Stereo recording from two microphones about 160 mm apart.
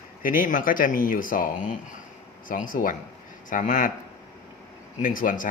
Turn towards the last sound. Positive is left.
turn(degrees=55)  # may be behind; listen again after turning